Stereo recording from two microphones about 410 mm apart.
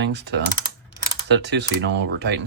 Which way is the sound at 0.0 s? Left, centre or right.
Right.